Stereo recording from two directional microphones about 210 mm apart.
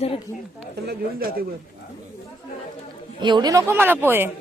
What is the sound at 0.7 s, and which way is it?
Speech, 50° right (ahead or behind).